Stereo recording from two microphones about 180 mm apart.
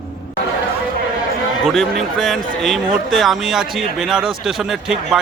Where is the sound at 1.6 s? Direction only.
Centre (ahead or behind).